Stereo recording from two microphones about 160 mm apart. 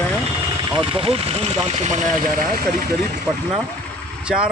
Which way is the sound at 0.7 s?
35° right (ahead or behind).